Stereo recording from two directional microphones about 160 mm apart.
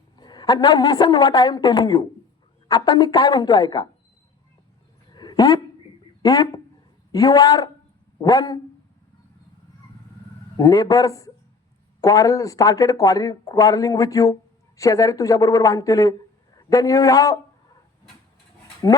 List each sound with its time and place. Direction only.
0.2 s speech: 25° left (ahead or behind)
5.1 s dog: 25° left (ahead or behind)
6.2 s speech: 25° left (ahead or behind)
10.6 s a man's voice: 25° left (ahead or behind)